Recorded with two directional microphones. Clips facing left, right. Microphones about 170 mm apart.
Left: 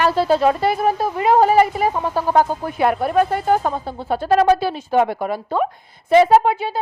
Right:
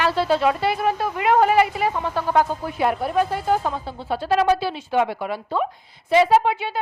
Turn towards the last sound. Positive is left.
turn(degrees=40)  # may be behind; listen again after turning